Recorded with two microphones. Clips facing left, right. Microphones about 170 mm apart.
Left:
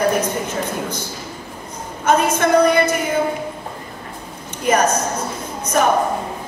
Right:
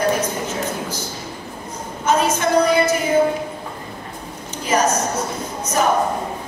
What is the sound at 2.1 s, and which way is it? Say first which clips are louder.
Speech: left 2 dB; 55° left (ahead or behind).